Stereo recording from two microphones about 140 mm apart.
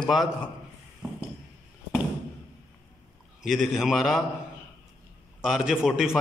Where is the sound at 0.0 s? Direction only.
Centre (ahead or behind).